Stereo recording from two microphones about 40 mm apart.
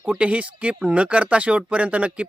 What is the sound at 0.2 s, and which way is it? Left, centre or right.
Speech, right.